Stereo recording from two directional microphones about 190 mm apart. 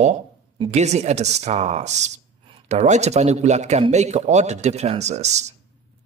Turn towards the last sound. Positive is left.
turn(degrees=-35)  # may be behind; listen again after turning